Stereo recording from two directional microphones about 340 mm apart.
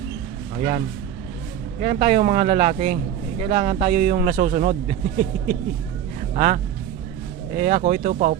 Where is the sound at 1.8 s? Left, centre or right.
Right.